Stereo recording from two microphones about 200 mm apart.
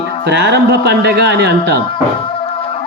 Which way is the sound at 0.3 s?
55° right (ahead or behind).